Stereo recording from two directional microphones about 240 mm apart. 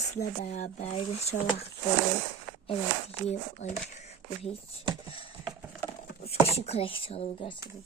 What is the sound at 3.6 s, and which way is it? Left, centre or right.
Speech, left.